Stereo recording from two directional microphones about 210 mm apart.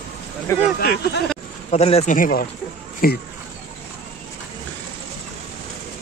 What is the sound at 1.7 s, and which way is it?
Speech, 30° left (ahead or behind).